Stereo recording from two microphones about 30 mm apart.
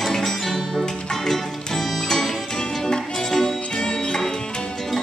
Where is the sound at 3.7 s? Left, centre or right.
Left.